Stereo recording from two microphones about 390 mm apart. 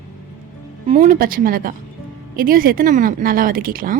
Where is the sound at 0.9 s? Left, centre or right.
Centre.